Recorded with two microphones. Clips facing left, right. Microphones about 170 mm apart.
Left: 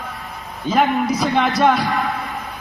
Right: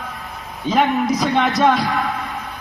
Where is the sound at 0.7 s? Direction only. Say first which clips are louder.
Even; 5° left (ahead or behind).